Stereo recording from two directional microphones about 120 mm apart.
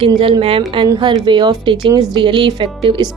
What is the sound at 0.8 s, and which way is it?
Speech, 35° right (ahead or behind).